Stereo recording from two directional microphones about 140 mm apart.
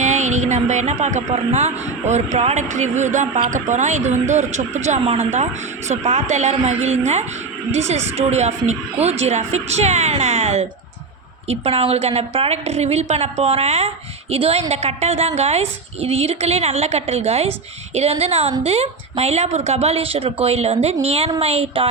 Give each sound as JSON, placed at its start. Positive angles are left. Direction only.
{"t": 0.0, "sound": "a woman's voice", "side_deg": -55}